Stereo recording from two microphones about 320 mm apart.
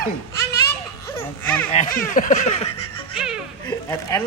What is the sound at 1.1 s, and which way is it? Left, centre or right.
Baby laughter, centre.